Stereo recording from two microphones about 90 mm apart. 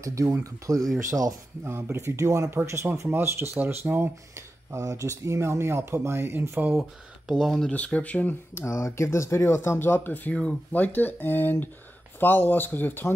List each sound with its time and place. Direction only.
0.0 s speech: 35° right (ahead or behind)
1.6 s speech: 25° right (ahead or behind)
6.8 s speech: centre (ahead or behind)
7.7 s speech: 15° left (ahead or behind)
8.6 s speech: 35° left (ahead or behind)